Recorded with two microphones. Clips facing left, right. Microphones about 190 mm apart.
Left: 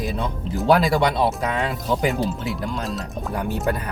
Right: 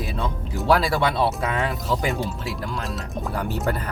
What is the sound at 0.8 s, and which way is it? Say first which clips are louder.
Speech: left 2 dB; 15° left (ahead or behind).